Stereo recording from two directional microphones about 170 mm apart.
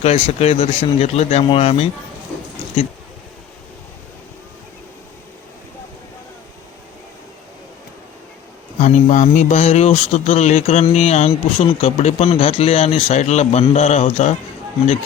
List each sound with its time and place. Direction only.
0.0 s speech: 40° left (ahead or behind)
8.8 s speech: 45° left (ahead or behind)